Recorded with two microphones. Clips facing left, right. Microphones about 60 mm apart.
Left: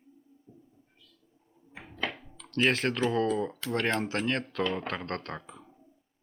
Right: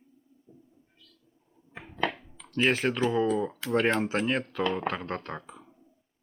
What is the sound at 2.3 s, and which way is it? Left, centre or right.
Speech, centre.